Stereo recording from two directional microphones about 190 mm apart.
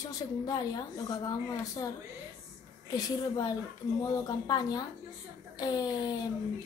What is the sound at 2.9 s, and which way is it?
A woman's voice, 20° left (ahead or behind).